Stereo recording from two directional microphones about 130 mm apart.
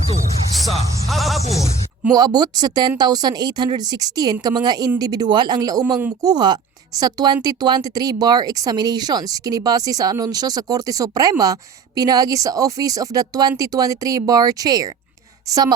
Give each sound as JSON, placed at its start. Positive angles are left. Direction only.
{"t": 0.5, "sound": "speech", "side_deg": 0}
{"t": 2.1, "sound": "a woman's voice", "side_deg": -30}